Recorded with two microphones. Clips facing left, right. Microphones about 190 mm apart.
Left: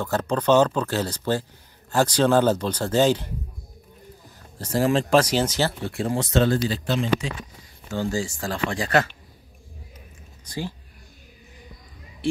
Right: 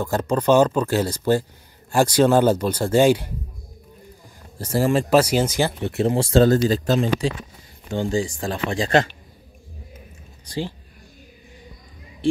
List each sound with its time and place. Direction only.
0.0 s speech: 10° right (ahead or behind)
4.6 s speech: 10° right (ahead or behind); by 7.3 s 40° right (ahead or behind)
7.9 s speech: 20° right (ahead or behind)